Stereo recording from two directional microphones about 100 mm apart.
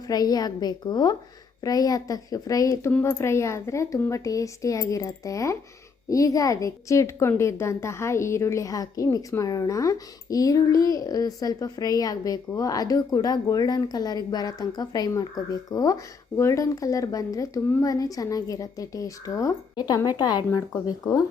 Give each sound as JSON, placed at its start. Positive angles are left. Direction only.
{"t": 0.1, "sound": "a woman's voice", "side_deg": 40}